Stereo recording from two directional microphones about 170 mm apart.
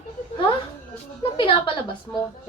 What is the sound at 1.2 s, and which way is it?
Speech, 30° left (ahead or behind).